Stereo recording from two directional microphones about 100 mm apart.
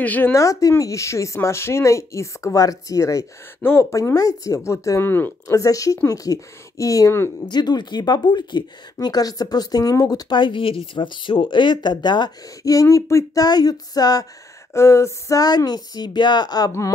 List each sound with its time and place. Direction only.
0.0 s speech: 15° left (ahead or behind)
0.3 s a woman's voice: 35° left (ahead or behind)
5.5 s a woman's voice: 35° left (ahead or behind)
7.4 s speech: 45° left (ahead or behind)
14.7 s a woman's voice: 30° left (ahead or behind)